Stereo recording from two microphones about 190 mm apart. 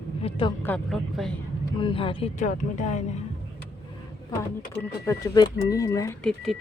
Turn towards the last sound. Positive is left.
turn(degrees=0)  # may be behind; listen again after turning